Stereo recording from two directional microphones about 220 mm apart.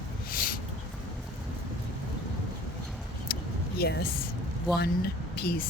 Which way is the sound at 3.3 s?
45° left (ahead or behind).